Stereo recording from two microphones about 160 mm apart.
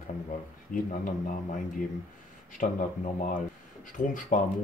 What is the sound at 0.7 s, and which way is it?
Speech, 55° left (ahead or behind).